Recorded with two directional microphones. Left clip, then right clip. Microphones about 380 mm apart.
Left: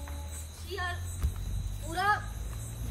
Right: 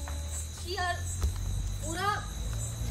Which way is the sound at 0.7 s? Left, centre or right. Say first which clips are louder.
Right 4 dB; right.